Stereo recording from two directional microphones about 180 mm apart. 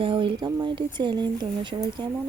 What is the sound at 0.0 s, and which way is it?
Speech, 30° right (ahead or behind).